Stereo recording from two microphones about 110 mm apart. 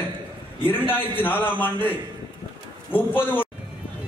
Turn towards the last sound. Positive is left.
turn(degrees=15)  # may be behind; listen again after turning